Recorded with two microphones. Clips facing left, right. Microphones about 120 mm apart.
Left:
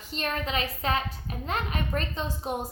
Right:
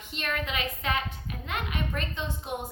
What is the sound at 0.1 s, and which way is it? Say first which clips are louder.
A woman's voice: left 2 dB; 35° left (ahead or behind).